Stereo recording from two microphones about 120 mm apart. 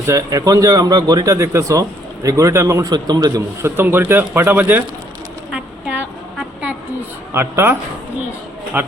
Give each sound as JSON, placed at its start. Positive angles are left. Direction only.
{"t": 0.1, "sound": "a man's voice", "side_deg": -30}
{"t": 3.8, "sound": "speech", "side_deg": -15}
{"t": 5.5, "sound": "a sound", "side_deg": -10}
{"t": 7.3, "sound": "a man's voice", "side_deg": -20}